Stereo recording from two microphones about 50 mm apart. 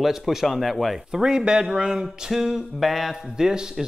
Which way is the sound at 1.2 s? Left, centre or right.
Centre.